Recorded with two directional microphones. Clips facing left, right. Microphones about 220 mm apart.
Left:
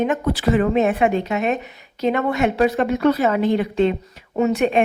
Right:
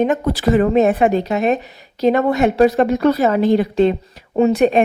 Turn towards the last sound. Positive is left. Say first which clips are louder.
# right 4 dB
turn(degrees=-35)  # may be behind; listen again after turning